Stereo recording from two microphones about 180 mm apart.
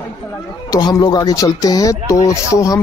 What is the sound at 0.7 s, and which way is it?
Speech, 25° left (ahead or behind).